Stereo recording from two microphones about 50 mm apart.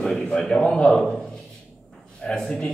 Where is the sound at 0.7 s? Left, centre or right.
Centre.